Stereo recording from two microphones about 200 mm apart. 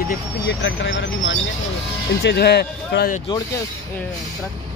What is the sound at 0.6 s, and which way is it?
Speech, 65° left (ahead or behind).